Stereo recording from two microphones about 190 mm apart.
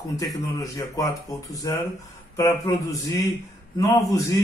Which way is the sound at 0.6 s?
15° left (ahead or behind).